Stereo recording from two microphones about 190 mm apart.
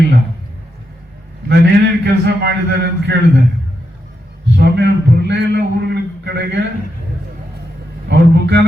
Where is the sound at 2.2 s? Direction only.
65° right (ahead or behind).